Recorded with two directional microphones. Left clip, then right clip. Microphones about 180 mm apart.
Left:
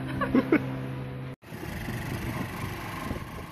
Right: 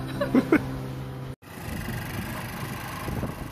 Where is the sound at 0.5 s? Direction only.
5° right (ahead or behind).